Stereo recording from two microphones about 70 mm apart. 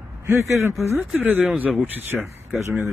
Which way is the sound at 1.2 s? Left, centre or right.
Right.